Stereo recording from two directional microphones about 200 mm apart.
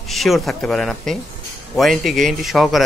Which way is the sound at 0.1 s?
Centre (ahead or behind).